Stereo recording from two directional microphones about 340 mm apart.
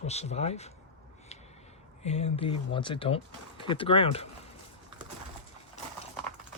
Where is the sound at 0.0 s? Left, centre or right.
Centre.